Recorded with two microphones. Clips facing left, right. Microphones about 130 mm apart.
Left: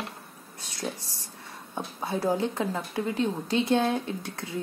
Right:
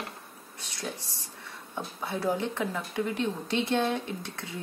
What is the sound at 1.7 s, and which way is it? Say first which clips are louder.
A woman's voice: left 3 dB; 25° left (ahead or behind).